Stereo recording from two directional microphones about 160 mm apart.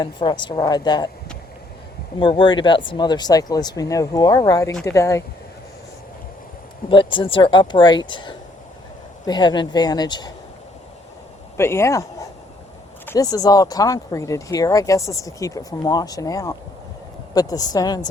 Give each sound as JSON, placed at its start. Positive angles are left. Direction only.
{"t": 0.0, "sound": "speech", "side_deg": 30}
{"t": 2.1, "sound": "speech", "side_deg": 30}
{"t": 6.9, "sound": "speech", "side_deg": 30}
{"t": 11.5, "sound": "speech", "side_deg": 15}